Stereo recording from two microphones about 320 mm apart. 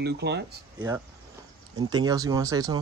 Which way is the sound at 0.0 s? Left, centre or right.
Right.